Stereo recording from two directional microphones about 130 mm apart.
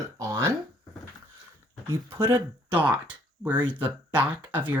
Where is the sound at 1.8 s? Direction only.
20° right (ahead or behind).